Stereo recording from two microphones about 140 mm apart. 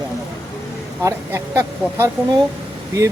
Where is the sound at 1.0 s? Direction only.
20° right (ahead or behind).